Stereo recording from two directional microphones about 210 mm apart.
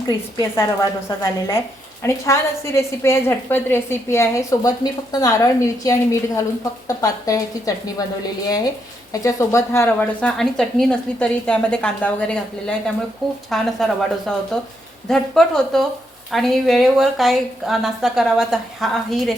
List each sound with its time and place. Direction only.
0.5 s a woman's voice: 15° left (ahead or behind); by 19.3 s centre (ahead or behind)